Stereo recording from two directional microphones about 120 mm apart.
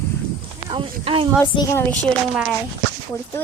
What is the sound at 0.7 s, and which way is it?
Clip-clop, 45° right (ahead or behind).